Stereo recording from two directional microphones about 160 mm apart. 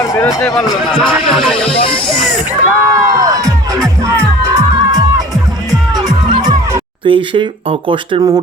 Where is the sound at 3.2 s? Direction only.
20° right (ahead or behind).